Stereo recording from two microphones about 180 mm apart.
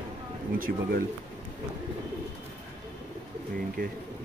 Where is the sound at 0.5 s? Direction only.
50° right (ahead or behind).